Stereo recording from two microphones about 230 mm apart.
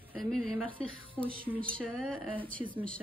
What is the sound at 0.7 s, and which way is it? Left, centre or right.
Speech, right.